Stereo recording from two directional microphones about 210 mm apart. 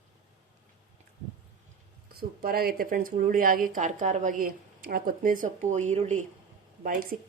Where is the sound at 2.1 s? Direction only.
45° right (ahead or behind).